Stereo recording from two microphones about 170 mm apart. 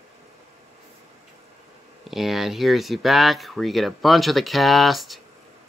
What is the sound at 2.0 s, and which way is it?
Speech, centre (ahead or behind).